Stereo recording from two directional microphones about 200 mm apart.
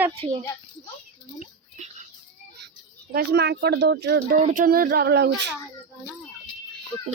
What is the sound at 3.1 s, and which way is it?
Speech, 55° right (ahead or behind).